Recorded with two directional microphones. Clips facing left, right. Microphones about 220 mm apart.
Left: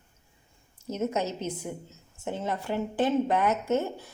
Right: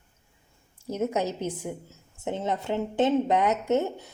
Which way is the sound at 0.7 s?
15° right (ahead or behind).